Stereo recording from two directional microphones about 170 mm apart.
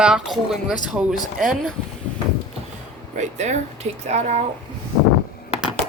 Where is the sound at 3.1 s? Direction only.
45° right (ahead or behind).